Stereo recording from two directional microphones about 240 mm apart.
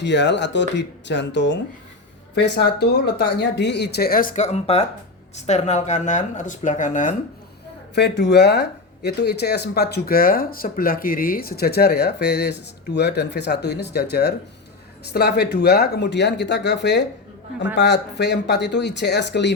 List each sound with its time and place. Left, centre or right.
0.0 s speech: left
7.9 s speech: left